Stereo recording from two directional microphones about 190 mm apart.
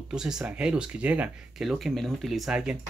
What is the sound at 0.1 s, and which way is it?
Speech, 5° right (ahead or behind).